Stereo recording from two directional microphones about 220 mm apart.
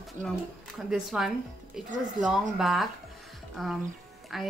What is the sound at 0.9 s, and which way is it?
Speech, centre (ahead or behind).